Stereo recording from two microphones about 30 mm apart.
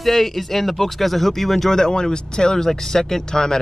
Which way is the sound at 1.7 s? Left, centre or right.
Left.